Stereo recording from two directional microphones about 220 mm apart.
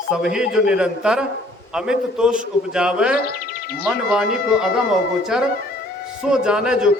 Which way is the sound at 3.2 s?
45° left (ahead or behind).